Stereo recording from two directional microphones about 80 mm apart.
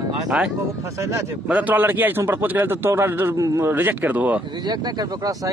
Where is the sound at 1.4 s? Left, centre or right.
Centre.